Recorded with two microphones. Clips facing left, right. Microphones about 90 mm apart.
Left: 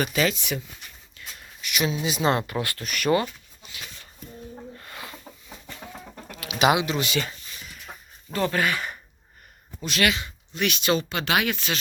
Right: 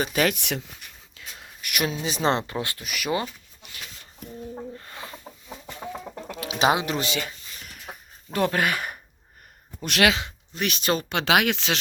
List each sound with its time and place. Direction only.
0.1 s speech: 60° right (ahead or behind)
1.2 s a sound: 90° right
1.6 s speech: 50° right (ahead or behind)
2.0 s speech: 35° right (ahead or behind)
2.5 s speech: 25° right (ahead or behind)
2.8 s speech: 5° right (ahead or behind)
4.8 s bird: 25° right (ahead or behind)
6.3 s bird: 30° right (ahead or behind)
7.6 s a sound: 65° right (ahead or behind)
9.8 s speech: 80° right
10.5 s speech: 35° right (ahead or behind)
11.1 s speech: 75° right (ahead or behind)